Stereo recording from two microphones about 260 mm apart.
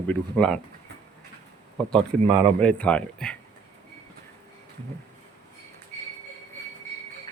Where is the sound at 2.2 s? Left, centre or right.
Right.